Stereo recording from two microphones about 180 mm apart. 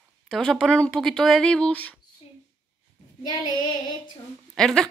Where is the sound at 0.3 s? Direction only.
5° left (ahead or behind).